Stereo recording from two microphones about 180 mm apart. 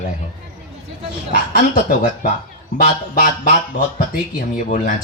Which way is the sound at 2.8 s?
50° left (ahead or behind).